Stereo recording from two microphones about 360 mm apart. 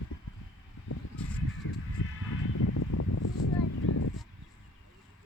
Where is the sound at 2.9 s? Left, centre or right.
Left.